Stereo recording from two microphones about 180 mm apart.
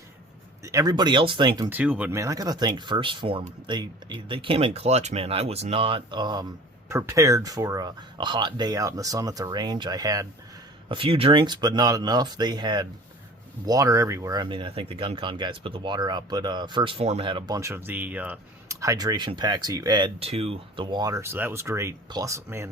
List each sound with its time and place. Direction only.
0.6 s speech: 20° right (ahead or behind)
1.7 s speech: 10° right (ahead or behind)
20.1 s speech: 35° right (ahead or behind); by 22.7 s 15° right (ahead or behind)